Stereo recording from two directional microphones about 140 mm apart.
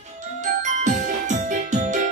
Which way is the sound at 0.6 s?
60° right (ahead or behind).